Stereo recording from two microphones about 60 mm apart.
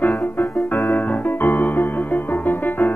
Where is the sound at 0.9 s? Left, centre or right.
Left.